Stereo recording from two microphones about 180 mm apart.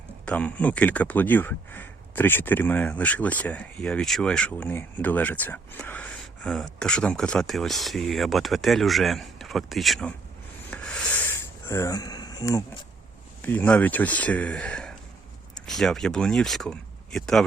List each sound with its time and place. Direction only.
0.3 s speech: 10° left (ahead or behind)
10.7 s a sound: 10° left (ahead or behind)
13.4 s speech: 10° left (ahead or behind)